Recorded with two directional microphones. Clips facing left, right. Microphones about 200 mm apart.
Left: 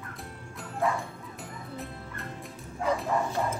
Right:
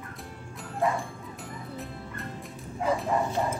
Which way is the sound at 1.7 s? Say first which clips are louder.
Even; centre (ahead or behind).